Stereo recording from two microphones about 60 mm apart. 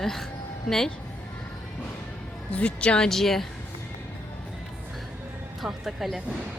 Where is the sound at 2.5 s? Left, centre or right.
Centre.